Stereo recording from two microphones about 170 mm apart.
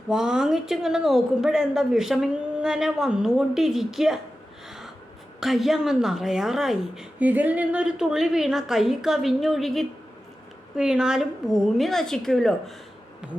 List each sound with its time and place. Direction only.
0.1 s a woman's voice: 5° right (ahead or behind)
5.4 s a woman's voice: centre (ahead or behind)